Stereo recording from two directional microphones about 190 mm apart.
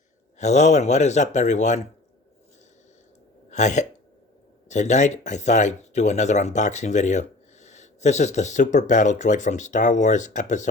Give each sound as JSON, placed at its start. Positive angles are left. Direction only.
{"t": 0.3, "sound": "speech", "side_deg": 35}
{"t": 3.5, "sound": "speech", "side_deg": 40}